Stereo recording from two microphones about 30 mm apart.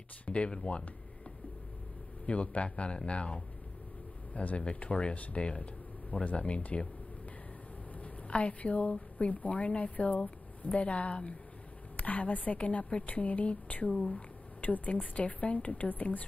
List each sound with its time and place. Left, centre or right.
0.3 s speech: left
2.2 s a woman's voice: left
4.3 s speech: left
4.7 s a woman's voice: left
8.3 s a woman's voice: left
12.0 s speech: left
13.9 s speech: left
14.6 s speech: left